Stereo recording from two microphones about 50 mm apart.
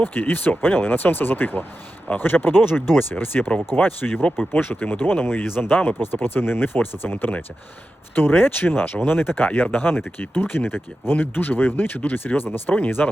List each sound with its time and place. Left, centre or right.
0.0 s speech: left
13.0 s speech: left